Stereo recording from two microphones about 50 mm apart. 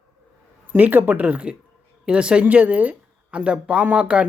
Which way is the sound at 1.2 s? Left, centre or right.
Right.